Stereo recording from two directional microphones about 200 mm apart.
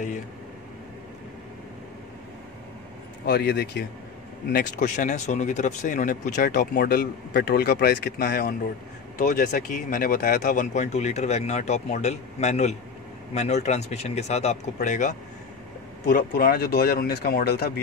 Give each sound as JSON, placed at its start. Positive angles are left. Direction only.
{"t": 3.3, "sound": "a man's voice", "side_deg": 55}
{"t": 4.5, "sound": "speech", "side_deg": 45}
{"t": 9.2, "sound": "speech", "side_deg": 40}